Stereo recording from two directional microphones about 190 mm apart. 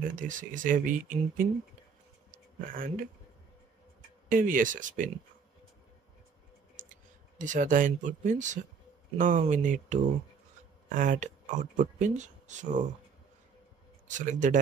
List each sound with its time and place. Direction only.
0.2 s speech: 45° right (ahead or behind)
2.3 s a sound: 45° right (ahead or behind)
4.3 s speech: 45° right (ahead or behind)
7.3 s speech: 40° right (ahead or behind)
14.0 s speech: 40° right (ahead or behind)